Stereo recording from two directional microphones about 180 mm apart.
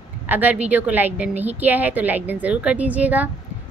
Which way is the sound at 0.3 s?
10° right (ahead or behind).